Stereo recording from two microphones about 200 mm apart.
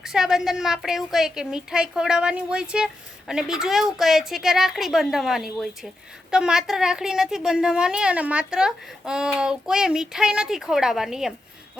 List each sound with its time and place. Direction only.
0.0 s a woman's voice: centre (ahead or behind)